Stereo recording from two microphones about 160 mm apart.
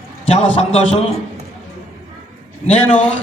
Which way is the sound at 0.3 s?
40° left (ahead or behind).